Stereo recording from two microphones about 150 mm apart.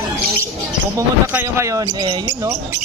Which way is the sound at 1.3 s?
20° right (ahead or behind).